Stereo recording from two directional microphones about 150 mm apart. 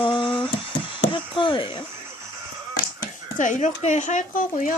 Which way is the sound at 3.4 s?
55° left (ahead or behind).